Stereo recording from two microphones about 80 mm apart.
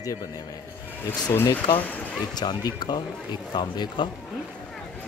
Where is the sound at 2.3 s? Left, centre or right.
Left.